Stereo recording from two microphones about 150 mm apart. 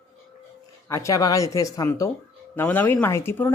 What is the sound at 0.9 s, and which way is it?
Speech, 20° left (ahead or behind).